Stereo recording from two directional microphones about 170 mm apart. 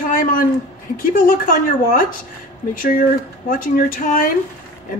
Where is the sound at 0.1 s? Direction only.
55° left (ahead or behind).